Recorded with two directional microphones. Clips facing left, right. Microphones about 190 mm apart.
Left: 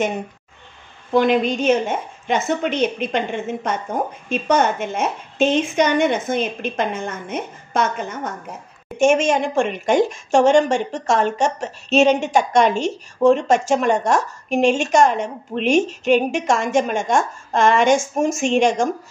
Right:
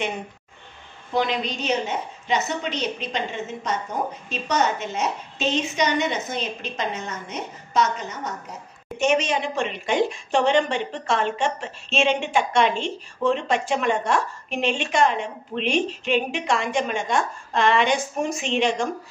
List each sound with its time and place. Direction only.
1.1 s a woman's voice: 50° left (ahead or behind)